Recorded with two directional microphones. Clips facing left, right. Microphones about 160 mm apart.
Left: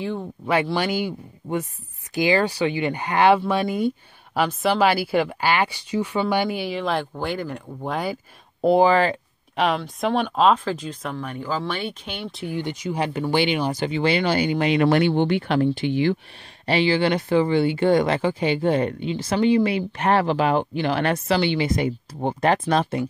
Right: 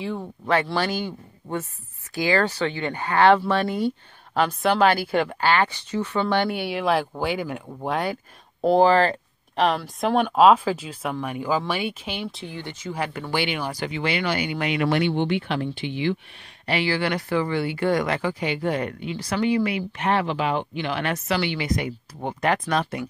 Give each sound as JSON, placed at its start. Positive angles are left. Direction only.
{"t": 0.7, "sound": "speech", "side_deg": 10}
{"t": 12.5, "sound": "speech", "side_deg": 15}
{"t": 16.6, "sound": "speech", "side_deg": 25}
{"t": 20.0, "sound": "speech", "side_deg": 40}